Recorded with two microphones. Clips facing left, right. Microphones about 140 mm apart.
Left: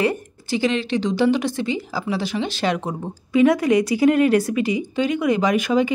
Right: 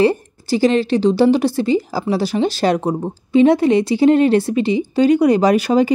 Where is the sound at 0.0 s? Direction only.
35° right (ahead or behind).